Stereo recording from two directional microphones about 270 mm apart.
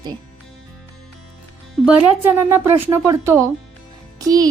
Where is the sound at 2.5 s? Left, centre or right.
Centre.